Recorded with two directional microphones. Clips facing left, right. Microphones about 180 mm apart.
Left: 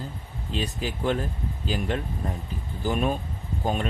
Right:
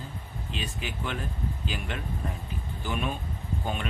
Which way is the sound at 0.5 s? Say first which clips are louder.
Left 7 dB; 35° left (ahead or behind).